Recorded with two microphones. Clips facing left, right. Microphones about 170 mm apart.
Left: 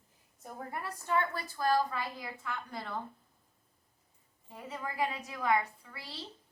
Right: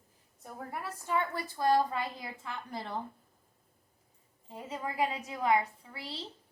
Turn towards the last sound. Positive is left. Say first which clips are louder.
# right 5 dB
turn(degrees=-25)  # may be behind; listen again after turning